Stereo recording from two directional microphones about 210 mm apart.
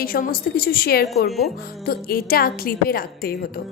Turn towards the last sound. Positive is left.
turn(degrees=45)  # may be behind; listen again after turning